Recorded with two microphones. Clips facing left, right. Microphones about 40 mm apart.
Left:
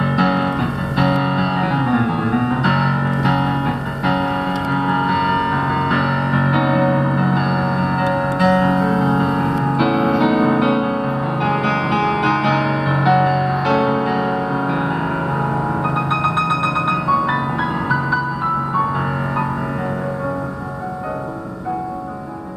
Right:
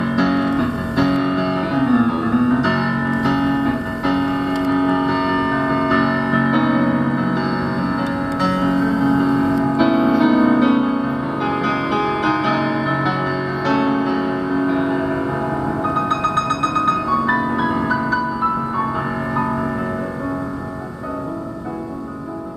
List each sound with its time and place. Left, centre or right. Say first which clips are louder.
0.1 s music: right 2 dB; centre
17.1 s music: even; centre